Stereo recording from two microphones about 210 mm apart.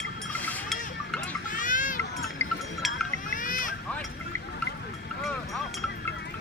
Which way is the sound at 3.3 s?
40° left (ahead or behind).